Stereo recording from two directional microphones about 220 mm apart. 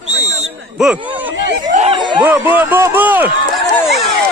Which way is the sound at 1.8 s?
25° right (ahead or behind).